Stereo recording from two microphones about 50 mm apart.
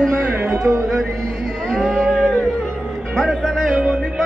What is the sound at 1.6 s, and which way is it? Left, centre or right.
Music, centre.